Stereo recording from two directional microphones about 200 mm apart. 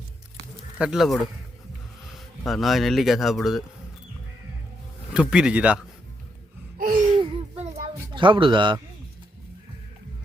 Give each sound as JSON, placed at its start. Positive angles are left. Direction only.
{"t": 0.8, "sound": "speech", "side_deg": 0}
{"t": 5.1, "sound": "speech", "side_deg": -5}
{"t": 6.7, "sound": "laughter", "side_deg": -45}
{"t": 7.2, "sound": "a sound", "side_deg": -30}
{"t": 8.1, "sound": "speech", "side_deg": -25}